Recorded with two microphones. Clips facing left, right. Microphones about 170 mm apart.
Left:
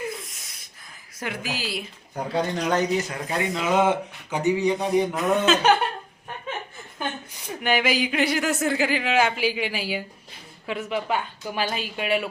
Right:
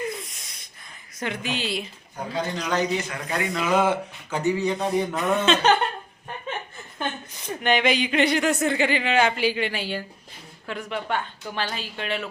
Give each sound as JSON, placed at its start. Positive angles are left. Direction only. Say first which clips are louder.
{"t": 0.0, "sound": "a sound", "louder": "right 2 dB", "side_deg": 0}
{"t": 1.2, "sound": "speech", "louder": "right 2 dB", "side_deg": 5}
{"t": 2.3, "sound": "a man's voice", "louder": "left 3 dB", "side_deg": 50}
{"t": 3.1, "sound": "speech", "louder": "left 1 dB", "side_deg": 25}
{"t": 5.1, "sound": "speech", "louder": "left 1 dB", "side_deg": 0}
{"t": 7.3, "sound": "speech", "louder": "right 1 dB", "side_deg": 10}